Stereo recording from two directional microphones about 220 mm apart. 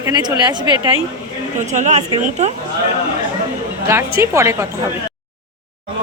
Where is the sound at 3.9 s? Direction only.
10° right (ahead or behind).